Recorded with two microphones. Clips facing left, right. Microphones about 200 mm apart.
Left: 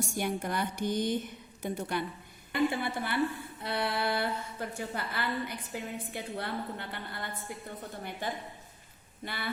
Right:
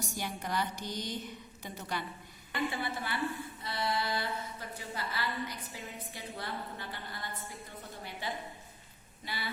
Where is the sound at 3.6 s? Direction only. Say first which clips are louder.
Left 3 dB; 60° left (ahead or behind).